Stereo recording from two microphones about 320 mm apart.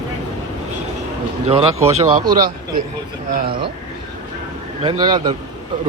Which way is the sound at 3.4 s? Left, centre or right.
Centre.